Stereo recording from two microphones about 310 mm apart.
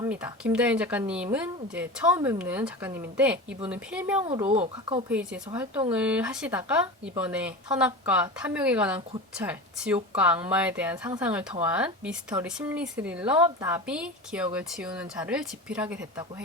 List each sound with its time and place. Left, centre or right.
0.0 s speech: centre
4.3 s speech: centre